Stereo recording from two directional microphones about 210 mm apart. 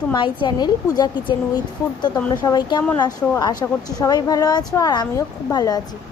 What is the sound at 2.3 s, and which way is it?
A woman's voice, 20° left (ahead or behind).